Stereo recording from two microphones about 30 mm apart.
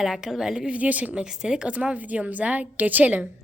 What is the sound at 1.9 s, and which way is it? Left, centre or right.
A woman's voice, right.